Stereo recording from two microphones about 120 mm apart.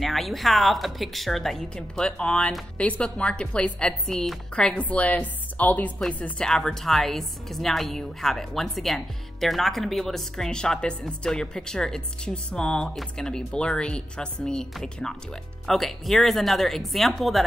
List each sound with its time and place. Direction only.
0.0 s a woman's voice: centre (ahead or behind)